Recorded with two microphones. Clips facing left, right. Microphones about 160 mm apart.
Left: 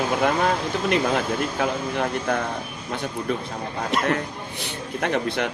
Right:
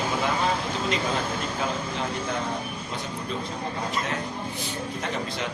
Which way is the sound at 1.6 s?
60° left (ahead or behind).